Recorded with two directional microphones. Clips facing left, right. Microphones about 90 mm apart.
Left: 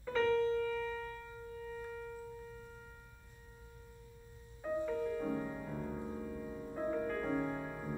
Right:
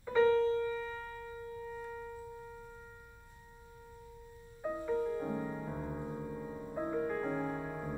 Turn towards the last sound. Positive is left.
turn(degrees=-10)  # may be behind; listen again after turning